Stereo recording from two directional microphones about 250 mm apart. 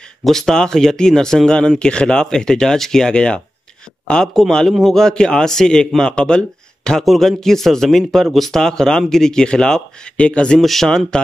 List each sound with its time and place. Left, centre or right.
0.2 s a man's voice: centre